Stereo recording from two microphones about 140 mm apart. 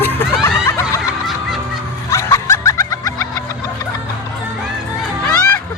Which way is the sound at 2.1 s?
25° left (ahead or behind).